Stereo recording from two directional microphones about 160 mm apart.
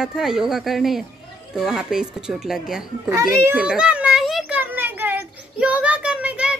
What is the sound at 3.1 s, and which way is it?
Speech, 15° right (ahead or behind).